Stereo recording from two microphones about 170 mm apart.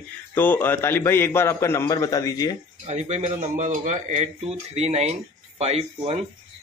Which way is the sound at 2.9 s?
40° right (ahead or behind).